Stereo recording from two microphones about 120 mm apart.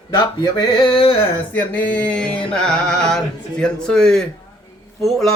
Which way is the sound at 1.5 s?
15° left (ahead or behind).